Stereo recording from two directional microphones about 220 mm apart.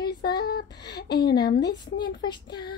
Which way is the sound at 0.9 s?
50° left (ahead or behind).